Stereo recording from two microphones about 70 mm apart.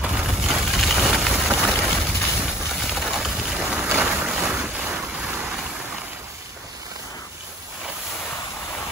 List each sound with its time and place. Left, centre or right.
0.0 s a sound: centre
1.8 s boat: centre
4.3 s boat: centre